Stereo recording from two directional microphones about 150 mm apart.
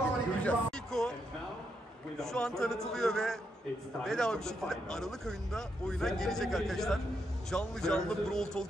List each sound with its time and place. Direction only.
0.4 s music: 10° left (ahead or behind)
2.1 s speech: 5° left (ahead or behind)